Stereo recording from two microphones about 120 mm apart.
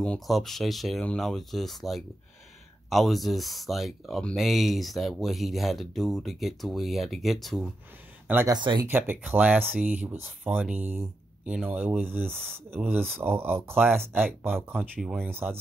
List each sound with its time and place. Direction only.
0.0 s speech: 5° left (ahead or behind)
8.5 s speech: 40° right (ahead or behind)
8.8 s speech: 15° right (ahead or behind)
14.7 s speech: 5° right (ahead or behind)
15.2 s speech: 20° right (ahead or behind)